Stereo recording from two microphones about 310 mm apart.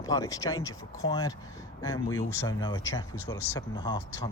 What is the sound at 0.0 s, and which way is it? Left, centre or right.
Speech, centre.